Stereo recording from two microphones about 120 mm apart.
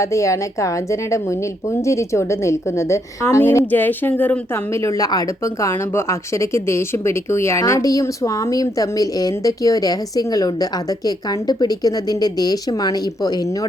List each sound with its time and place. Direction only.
0.0 s speech: 25° left (ahead or behind)